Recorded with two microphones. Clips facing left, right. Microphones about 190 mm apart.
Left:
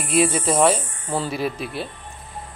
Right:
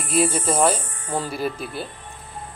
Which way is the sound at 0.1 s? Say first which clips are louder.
Left 2 dB; centre (ahead or behind).